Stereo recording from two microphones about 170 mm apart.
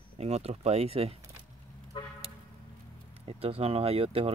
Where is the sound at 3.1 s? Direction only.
35° right (ahead or behind).